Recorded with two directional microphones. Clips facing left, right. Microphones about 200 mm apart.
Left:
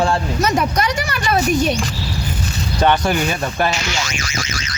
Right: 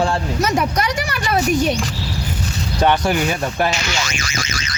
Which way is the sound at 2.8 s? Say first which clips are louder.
Even; 15° right (ahead or behind).